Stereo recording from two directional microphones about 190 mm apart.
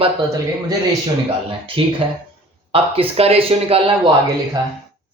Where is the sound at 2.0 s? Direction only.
30° right (ahead or behind).